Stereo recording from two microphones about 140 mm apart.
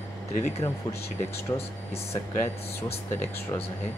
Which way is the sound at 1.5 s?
45° left (ahead or behind).